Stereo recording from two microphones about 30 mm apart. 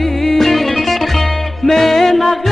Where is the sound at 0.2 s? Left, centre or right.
Centre.